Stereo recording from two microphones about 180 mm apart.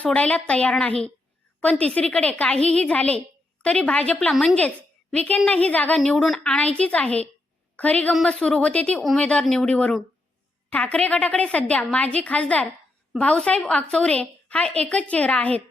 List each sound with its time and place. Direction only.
0.0 s a woman's voice: 5° left (ahead or behind)